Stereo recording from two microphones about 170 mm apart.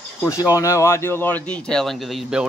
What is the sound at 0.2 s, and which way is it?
Speech, 20° left (ahead or behind).